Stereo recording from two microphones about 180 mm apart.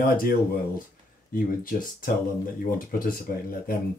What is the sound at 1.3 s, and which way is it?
Speech, 50° left (ahead or behind).